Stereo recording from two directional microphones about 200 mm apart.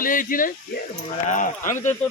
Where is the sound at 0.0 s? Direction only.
45° left (ahead or behind).